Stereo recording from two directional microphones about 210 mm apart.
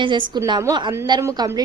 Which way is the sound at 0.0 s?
20° right (ahead or behind).